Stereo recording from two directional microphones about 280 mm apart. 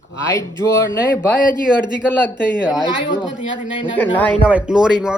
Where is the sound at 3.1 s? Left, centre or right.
Centre.